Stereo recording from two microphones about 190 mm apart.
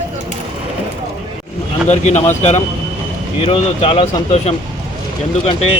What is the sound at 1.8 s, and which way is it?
Speech, 35° left (ahead or behind).